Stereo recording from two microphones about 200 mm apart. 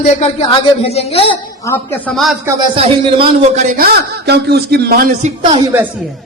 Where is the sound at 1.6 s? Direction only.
10° left (ahead or behind).